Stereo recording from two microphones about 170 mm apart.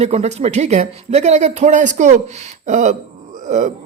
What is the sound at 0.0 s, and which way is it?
Speech, 40° right (ahead or behind).